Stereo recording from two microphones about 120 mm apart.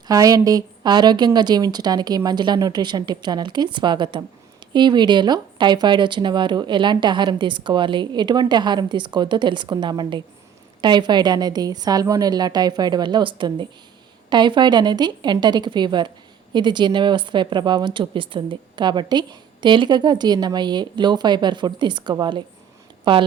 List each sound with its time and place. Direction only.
0.1 s a woman's voice: 30° right (ahead or behind)